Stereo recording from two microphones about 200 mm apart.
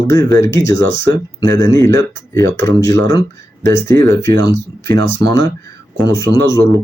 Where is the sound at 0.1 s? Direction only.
15° left (ahead or behind).